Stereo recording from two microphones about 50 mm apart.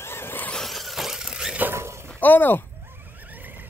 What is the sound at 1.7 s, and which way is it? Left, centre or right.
Shatter, right.